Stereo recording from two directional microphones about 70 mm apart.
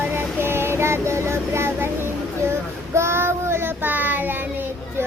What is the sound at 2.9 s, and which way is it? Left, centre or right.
Child singing, right.